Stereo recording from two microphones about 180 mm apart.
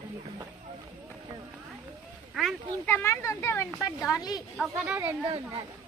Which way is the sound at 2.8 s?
15° left (ahead or behind).